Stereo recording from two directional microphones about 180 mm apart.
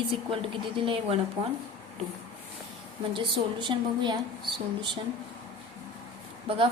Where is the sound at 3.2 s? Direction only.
25° right (ahead or behind).